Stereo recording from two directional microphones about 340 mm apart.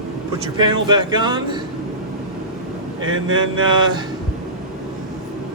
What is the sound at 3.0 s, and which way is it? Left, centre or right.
Speech, right.